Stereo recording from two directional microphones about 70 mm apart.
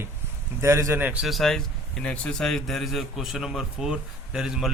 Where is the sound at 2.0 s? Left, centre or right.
Centre.